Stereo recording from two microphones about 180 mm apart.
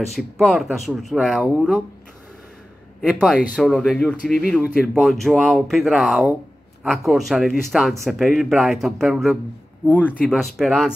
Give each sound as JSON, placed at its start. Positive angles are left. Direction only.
{"t": 0.1, "sound": "speech", "side_deg": 0}
{"t": 3.0, "sound": "speech", "side_deg": 0}
{"t": 4.2, "sound": "speech", "side_deg": 55}
{"t": 4.5, "sound": "speech", "side_deg": -5}
{"t": 9.8, "sound": "speech", "side_deg": 10}